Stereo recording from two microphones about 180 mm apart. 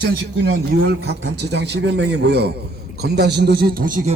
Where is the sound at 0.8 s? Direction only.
75° right (ahead or behind); by 3.9 s 55° right (ahead or behind).